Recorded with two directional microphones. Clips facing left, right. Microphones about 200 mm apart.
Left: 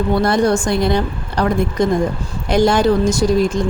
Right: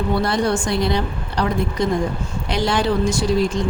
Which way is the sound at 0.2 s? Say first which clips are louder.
Left 5 dB; 45° left (ahead or behind).